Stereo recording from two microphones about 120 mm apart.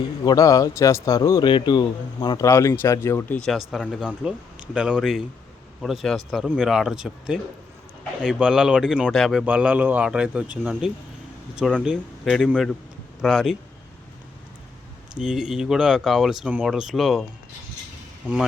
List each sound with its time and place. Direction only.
0.3 s a man's voice: 30° left (ahead or behind)
1.5 s speech: 40° left (ahead or behind)
2.4 s a man's voice: 25° left (ahead or behind)
3.3 s speech: 5° left (ahead or behind)
9.4 s speech: 10° right (ahead or behind)
15.2 s speech: 5° right (ahead or behind)